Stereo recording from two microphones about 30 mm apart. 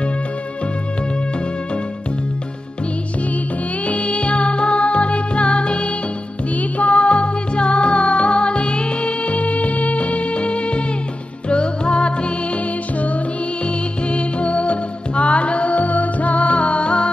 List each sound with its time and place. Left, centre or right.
3.8 s music: left
6.5 s music: left
12.5 s music: left
13.7 s music: left